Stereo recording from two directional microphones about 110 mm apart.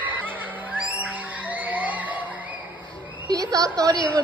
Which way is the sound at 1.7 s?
15° right (ahead or behind).